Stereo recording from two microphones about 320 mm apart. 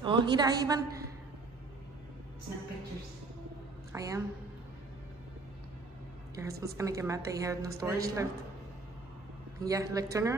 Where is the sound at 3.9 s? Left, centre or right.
Centre.